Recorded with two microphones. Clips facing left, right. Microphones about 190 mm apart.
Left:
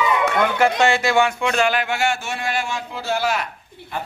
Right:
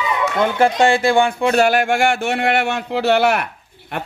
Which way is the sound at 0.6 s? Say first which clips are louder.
Right 5 dB; 30° right (ahead or behind).